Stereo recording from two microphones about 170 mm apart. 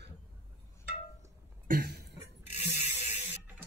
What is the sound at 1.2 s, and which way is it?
Cough, 55° right (ahead or behind).